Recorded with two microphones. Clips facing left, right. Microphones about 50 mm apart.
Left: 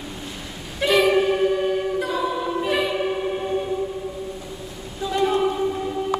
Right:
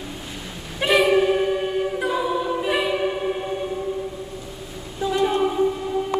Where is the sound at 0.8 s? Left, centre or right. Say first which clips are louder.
Even; right.